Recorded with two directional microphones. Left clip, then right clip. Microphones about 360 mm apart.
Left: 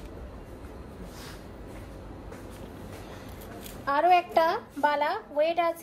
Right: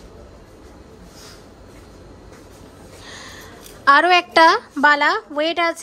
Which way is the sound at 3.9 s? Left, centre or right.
Right.